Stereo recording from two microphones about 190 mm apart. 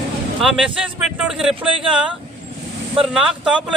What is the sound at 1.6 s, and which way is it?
Speech, 25° right (ahead or behind).